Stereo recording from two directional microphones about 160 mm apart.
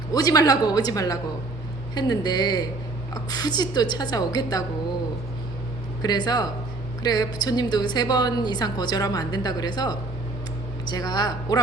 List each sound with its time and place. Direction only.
0.1 s a woman's voice: 20° left (ahead or behind)
6.0 s a woman's voice: 25° left (ahead or behind)